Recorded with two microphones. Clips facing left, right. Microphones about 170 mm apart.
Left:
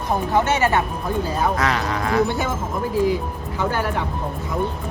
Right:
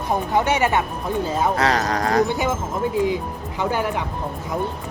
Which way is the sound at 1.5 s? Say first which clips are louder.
Right 2 dB; 35° right (ahead or behind).